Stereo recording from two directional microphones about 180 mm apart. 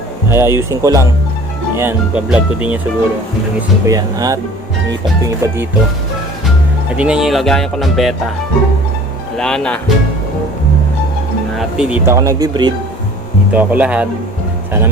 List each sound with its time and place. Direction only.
0.3 s speech: 15° right (ahead or behind)
3.8 s speech: 20° right (ahead or behind)
6.9 s speech: 5° right (ahead or behind)
9.4 s speech: 5° left (ahead or behind)
11.5 s speech: 5° right (ahead or behind); by 12.7 s 20° right (ahead or behind)
13.5 s speech: 10° right (ahead or behind)